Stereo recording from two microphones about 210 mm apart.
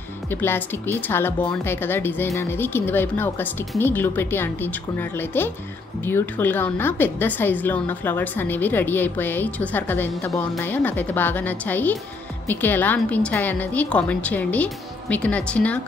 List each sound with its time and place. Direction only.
0.3 s a woman's voice: 10° left (ahead or behind)